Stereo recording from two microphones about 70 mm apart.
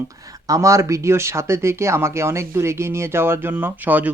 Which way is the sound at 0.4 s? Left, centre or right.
Right.